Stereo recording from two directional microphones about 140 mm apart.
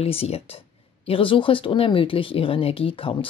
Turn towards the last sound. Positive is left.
turn(degrees=40)  # may be behind; listen again after turning